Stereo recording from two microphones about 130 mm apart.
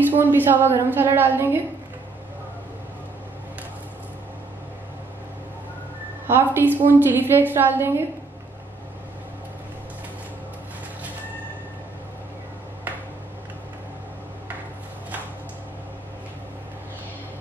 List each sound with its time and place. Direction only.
0.0 s a woman's voice: 15° right (ahead or behind)
6.2 s a woman's voice: 15° right (ahead or behind)